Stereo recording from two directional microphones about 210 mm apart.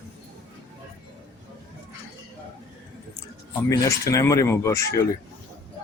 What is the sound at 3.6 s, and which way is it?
Speech, 15° left (ahead or behind).